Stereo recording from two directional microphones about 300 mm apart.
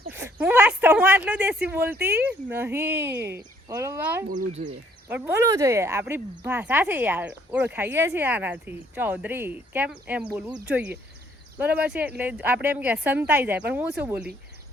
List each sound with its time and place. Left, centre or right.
0.1 s a sound: centre
2.0 s speech: centre
4.3 s speech: right
5.0 s speech: centre